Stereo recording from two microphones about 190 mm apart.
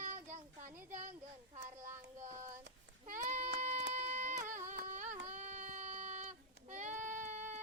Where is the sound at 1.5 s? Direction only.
40° right (ahead or behind).